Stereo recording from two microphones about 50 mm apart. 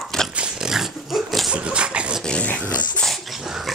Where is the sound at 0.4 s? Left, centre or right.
Centre.